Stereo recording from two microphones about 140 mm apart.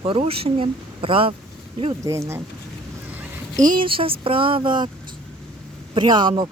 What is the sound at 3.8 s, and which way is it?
Speech, 40° right (ahead or behind).